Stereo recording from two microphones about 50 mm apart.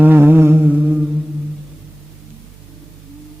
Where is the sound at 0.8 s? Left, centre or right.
Centre.